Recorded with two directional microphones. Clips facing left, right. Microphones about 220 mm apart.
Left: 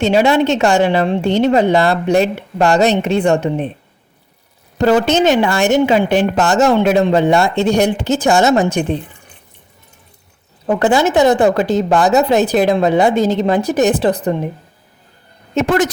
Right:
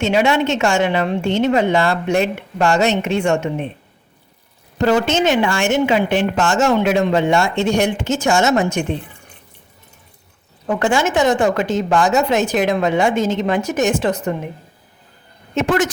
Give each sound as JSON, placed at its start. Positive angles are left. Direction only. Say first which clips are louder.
{"t": 0.0, "sound": "a woman's voice", "louder": "left 4 dB", "side_deg": 35}
{"t": 4.8, "sound": "a woman's voice", "louder": "left 3 dB", "side_deg": 35}
{"t": 10.7, "sound": "a woman's voice", "louder": "left 4 dB", "side_deg": 35}
{"t": 15.5, "sound": "a woman's voice", "louder": "left 3 dB", "side_deg": 35}